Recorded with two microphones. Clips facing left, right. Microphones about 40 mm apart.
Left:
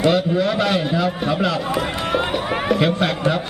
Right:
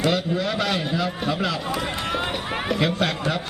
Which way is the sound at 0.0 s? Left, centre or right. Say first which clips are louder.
Left 5 dB; centre.